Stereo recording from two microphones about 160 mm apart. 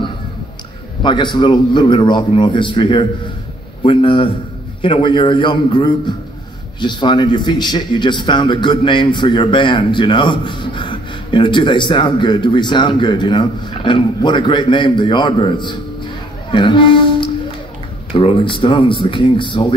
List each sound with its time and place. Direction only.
1.0 s a man's voice: 30° left (ahead or behind)
16.4 s music: 30° left (ahead or behind)
18.1 s speech: 35° left (ahead or behind)